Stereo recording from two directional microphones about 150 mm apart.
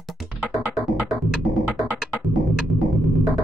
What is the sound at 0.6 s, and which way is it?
Music, centre (ahead or behind).